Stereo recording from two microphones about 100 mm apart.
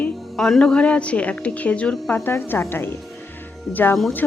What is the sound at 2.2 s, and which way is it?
A woman's voice, 25° left (ahead or behind).